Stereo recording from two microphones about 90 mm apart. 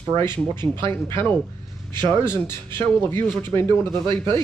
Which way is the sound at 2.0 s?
25° left (ahead or behind).